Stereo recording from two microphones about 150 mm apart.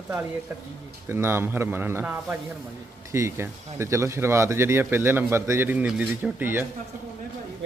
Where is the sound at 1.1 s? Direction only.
15° right (ahead or behind).